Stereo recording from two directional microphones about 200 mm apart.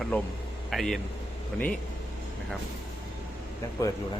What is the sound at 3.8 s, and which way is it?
Speech, 15° left (ahead or behind).